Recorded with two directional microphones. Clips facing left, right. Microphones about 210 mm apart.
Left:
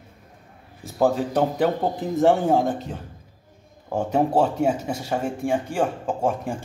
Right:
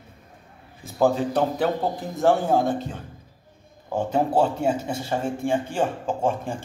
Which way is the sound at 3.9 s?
10° left (ahead or behind).